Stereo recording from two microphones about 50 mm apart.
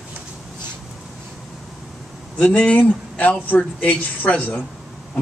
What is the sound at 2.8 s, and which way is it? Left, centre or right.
A man's voice, left.